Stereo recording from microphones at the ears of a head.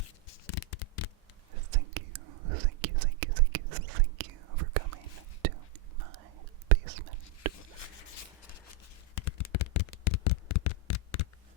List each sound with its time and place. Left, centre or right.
0.0 s scratch: left
1.5 s whispering: right
9.1 s a sound: left